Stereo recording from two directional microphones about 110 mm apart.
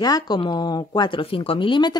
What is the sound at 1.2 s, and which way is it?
Speech, 55° left (ahead or behind).